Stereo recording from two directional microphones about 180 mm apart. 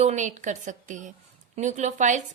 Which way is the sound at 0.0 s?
40° right (ahead or behind).